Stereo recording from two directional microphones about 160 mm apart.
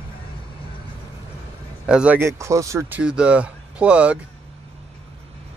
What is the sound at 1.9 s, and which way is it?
Speech, 5° right (ahead or behind).